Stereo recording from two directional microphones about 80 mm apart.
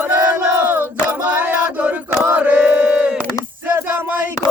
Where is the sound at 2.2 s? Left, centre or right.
Centre.